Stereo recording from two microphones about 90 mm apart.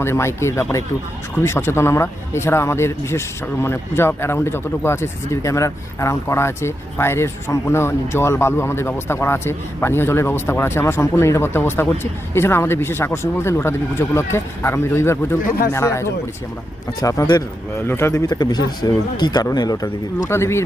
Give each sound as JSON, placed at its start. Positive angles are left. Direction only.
{"t": 0.0, "sound": "a man's voice", "side_deg": 30}
{"t": 18.3, "sound": "speech", "side_deg": 50}
{"t": 20.3, "sound": "speech", "side_deg": 30}